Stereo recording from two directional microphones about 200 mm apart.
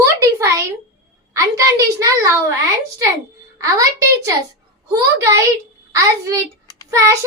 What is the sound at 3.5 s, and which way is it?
A woman's voice, 15° right (ahead or behind).